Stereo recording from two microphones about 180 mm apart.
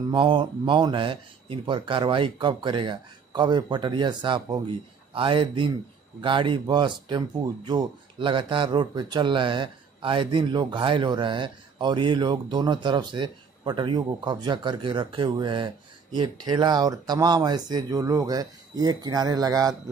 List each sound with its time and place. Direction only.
0.1 s speech: 25° right (ahead or behind)